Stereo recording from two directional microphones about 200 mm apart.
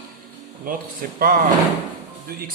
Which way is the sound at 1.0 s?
45° right (ahead or behind).